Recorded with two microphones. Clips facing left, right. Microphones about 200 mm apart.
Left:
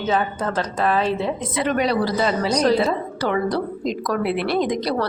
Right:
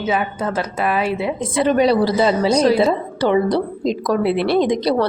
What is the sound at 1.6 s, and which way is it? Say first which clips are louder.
Speech: right 6 dB; 30° right (ahead or behind).